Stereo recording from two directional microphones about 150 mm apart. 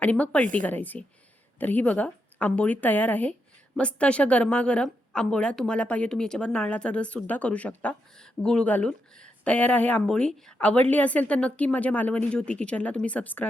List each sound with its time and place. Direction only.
0.0 s a woman's voice: 10° left (ahead or behind)